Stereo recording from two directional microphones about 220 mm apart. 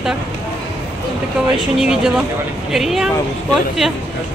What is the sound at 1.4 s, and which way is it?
Speech, 5° right (ahead or behind).